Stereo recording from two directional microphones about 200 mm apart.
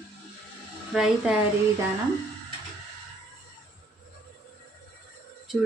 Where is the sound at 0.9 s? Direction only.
5° right (ahead or behind).